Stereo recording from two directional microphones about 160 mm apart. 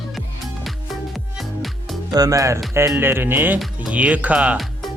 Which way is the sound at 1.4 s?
Centre (ahead or behind).